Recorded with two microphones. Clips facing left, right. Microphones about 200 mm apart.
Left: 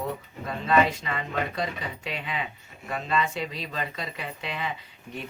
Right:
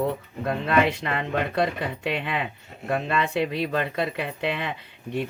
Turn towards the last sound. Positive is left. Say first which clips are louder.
# right 9 dB
turn(degrees=-65)  # may be behind; listen again after turning